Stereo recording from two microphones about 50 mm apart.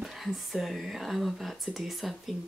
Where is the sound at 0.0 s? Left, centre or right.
Centre.